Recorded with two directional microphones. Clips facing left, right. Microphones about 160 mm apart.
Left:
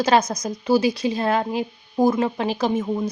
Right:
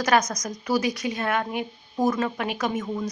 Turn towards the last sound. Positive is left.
turn(degrees=30)  # may be behind; listen again after turning